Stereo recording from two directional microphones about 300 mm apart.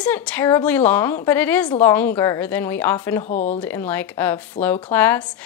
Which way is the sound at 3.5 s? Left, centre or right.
Centre.